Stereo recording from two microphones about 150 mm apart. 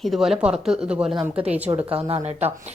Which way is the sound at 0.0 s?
Centre (ahead or behind).